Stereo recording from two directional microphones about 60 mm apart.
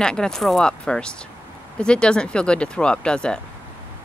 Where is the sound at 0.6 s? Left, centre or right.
Centre.